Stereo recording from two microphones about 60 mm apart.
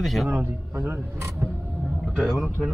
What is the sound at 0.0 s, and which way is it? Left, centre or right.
Speech, centre.